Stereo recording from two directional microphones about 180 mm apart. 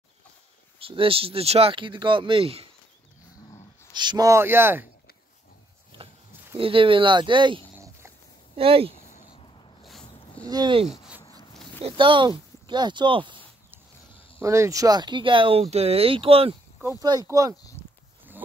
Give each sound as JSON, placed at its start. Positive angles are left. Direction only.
{"t": 0.7, "sound": "speech", "side_deg": -30}
{"t": 4.0, "sound": "speech", "side_deg": -20}
{"t": 6.5, "sound": "speech", "side_deg": -30}
{"t": 10.5, "sound": "speech", "side_deg": -25}
{"t": 10.9, "sound": "a sound", "side_deg": -5}
{"t": 11.8, "sound": "speech", "side_deg": -25}
{"t": 14.4, "sound": "speech", "side_deg": -15}
{"t": 17.0, "sound": "speech", "side_deg": -20}
{"t": 17.8, "sound": "livestock", "side_deg": 35}